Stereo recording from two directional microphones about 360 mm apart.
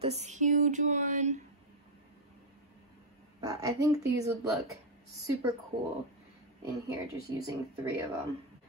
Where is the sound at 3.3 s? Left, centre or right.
Centre.